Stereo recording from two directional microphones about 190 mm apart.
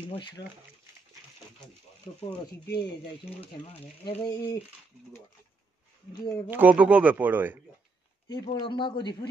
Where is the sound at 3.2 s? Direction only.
30° left (ahead or behind).